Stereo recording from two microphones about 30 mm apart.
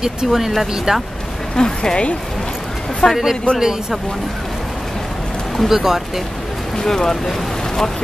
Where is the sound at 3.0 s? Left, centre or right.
Left.